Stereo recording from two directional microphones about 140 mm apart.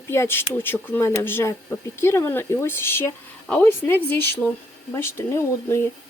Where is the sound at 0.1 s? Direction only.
15° left (ahead or behind).